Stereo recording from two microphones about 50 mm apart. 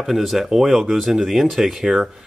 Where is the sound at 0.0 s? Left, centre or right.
Centre.